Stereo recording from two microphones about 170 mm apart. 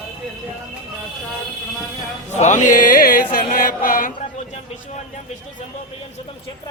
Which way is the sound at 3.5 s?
55° left (ahead or behind).